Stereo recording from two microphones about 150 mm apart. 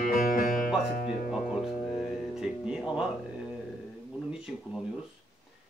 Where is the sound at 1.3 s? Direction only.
5° right (ahead or behind).